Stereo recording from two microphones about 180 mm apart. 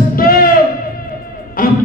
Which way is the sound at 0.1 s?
55° left (ahead or behind).